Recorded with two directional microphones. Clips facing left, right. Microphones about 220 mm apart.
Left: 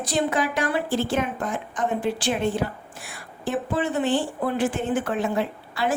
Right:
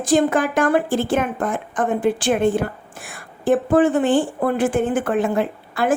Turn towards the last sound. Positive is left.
turn(degrees=-50)  # may be behind; listen again after turning